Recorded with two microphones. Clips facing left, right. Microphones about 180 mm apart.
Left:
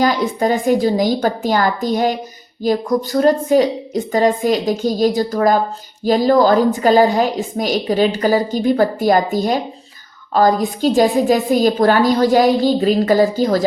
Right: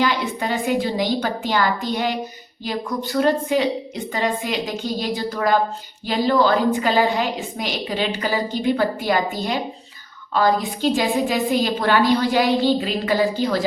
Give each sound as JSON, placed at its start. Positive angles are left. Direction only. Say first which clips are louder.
{"t": 0.0, "sound": "a woman's voice", "louder": "left 6 dB", "side_deg": 40}